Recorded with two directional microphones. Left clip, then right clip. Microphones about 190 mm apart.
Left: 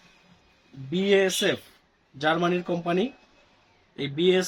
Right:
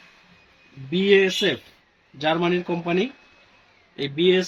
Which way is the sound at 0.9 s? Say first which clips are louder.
Right 4 dB; 15° left (ahead or behind).